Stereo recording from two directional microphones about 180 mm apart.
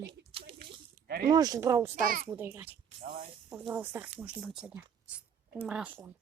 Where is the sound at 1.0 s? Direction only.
55° right (ahead or behind).